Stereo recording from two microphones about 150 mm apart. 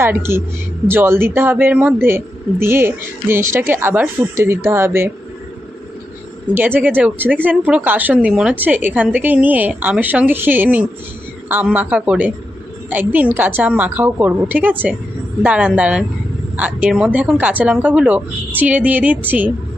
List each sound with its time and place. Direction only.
0.0 s speech: 15° right (ahead or behind)
6.6 s speech: 10° right (ahead or behind)